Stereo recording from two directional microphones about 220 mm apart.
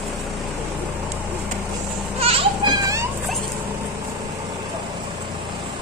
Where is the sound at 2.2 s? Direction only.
25° right (ahead or behind).